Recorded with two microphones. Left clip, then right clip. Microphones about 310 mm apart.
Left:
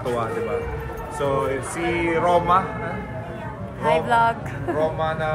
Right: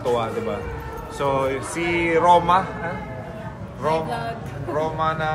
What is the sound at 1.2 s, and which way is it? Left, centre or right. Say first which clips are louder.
Speech: right 1 dB; right.